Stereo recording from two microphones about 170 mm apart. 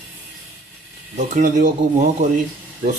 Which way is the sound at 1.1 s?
45° right (ahead or behind).